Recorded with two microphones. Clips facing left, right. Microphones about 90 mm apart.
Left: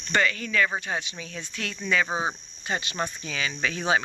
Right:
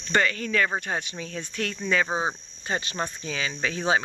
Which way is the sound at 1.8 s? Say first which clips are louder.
Even; 30° right (ahead or behind).